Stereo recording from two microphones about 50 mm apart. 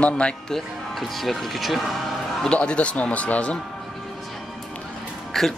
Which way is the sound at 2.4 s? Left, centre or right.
Left.